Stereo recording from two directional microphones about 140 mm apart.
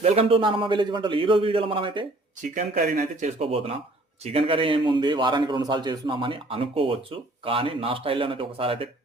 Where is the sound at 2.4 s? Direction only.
65° right (ahead or behind).